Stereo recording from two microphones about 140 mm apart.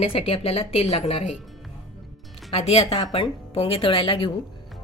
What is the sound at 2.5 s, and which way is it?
A woman's voice, 50° left (ahead or behind).